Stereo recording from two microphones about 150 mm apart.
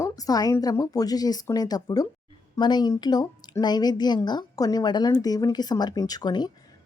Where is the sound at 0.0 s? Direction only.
25° left (ahead or behind).